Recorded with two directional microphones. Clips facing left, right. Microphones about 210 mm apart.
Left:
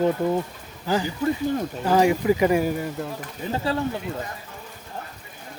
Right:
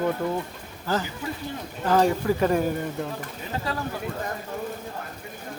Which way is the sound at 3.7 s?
30° left (ahead or behind).